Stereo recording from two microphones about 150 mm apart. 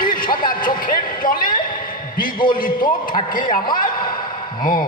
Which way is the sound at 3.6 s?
30° left (ahead or behind).